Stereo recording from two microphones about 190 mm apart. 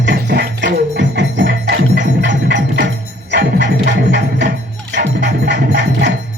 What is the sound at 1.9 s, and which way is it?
Music, 70° right (ahead or behind).